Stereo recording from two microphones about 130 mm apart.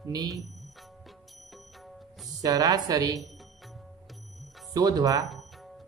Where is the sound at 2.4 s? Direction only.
30° right (ahead or behind).